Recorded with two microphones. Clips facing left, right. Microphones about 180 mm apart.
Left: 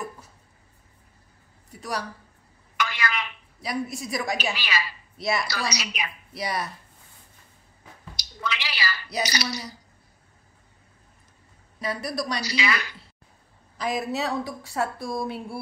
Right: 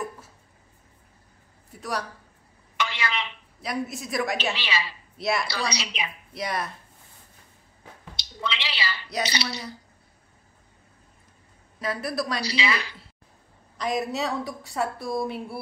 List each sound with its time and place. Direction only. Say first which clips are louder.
1.7 s a woman's voice: right 1 dB; centre (ahead or behind)
2.8 s a sound: even; 25° right (ahead or behind)
3.6 s a woman's voice: left 1 dB; centre (ahead or behind)
4.6 s a woman's voice: even; 25° right (ahead or behind)
5.1 s a woman's voice: right 1 dB; centre (ahead or behind)
5.5 s a woman's voice: even; 25° right (ahead or behind)
6.3 s a woman's voice: even; centre (ahead or behind)
8.2 s a sound: even; 25° right (ahead or behind)
9.2 s a woman's voice: left 1 dB; 25° right (ahead or behind)
11.8 s a woman's voice: right 1 dB; centre (ahead or behind)
12.4 s a woman's voice: even; 30° right (ahead or behind)
13.7 s a woman's voice: even; centre (ahead or behind)